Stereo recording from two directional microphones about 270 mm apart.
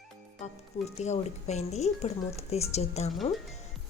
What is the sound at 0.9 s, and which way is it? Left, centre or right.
A woman's voice, left.